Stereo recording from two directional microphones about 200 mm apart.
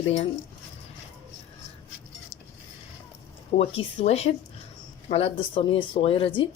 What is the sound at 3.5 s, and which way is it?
Speech, 30° left (ahead or behind).